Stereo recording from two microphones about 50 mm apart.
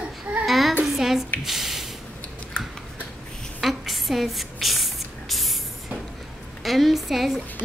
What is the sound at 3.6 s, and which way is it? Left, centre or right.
Spray, centre.